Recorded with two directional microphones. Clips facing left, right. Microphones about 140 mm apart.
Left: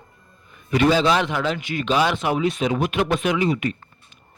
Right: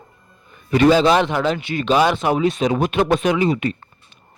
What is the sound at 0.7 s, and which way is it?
Speech, 40° right (ahead or behind).